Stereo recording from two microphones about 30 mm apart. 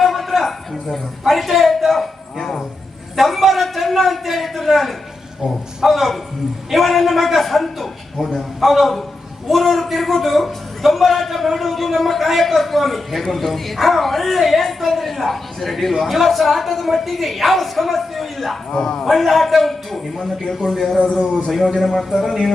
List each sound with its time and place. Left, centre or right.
0.0 s a sound: centre
1.3 s a man's voice: centre
2.4 s a man's voice: centre
3.2 s a man's voice: centre
18.7 s a man's voice: left
19.1 s a man's voice: centre
20.7 s a man's voice: centre